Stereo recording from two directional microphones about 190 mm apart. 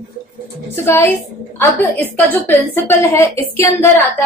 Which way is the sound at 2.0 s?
10° left (ahead or behind).